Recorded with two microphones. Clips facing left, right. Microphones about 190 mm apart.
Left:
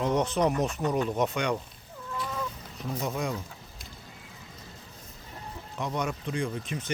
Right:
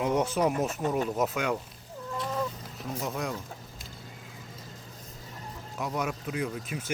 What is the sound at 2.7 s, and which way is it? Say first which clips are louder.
Speech: left 3 dB; centre (ahead or behind).